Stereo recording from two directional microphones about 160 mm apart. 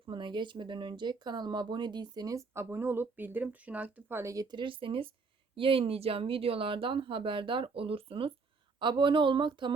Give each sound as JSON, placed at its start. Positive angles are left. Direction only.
{"t": 0.0, "sound": "speech", "side_deg": -30}